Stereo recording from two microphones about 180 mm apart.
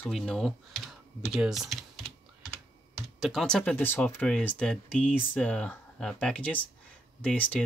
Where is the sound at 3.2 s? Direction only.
5° left (ahead or behind).